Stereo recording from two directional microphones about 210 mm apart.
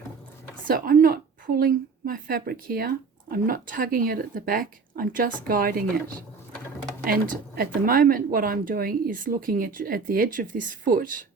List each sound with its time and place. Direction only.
0.7 s a woman's voice: 45° right (ahead or behind)
7.1 s a woman's voice: 45° right (ahead or behind)